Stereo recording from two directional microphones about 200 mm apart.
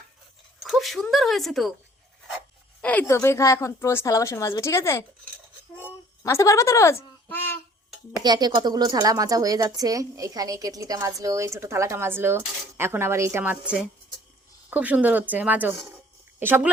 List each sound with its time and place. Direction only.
0.6 s a sound: centre (ahead or behind)
1.1 s speech: centre (ahead or behind)
2.8 s a woman's voice: 10° left (ahead or behind)
6.2 s a woman's voice: 15° left (ahead or behind)
8.1 s speech: 20° right (ahead or behind)